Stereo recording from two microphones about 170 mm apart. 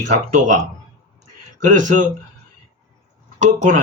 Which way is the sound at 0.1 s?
45° right (ahead or behind).